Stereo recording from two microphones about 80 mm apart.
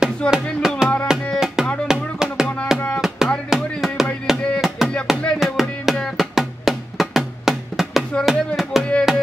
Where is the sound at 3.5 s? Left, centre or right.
Centre.